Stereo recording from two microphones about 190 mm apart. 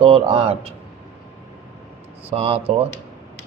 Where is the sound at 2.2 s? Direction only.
30° right (ahead or behind).